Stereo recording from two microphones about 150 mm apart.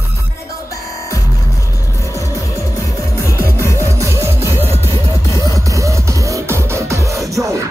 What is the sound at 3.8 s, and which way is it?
Music, 20° right (ahead or behind).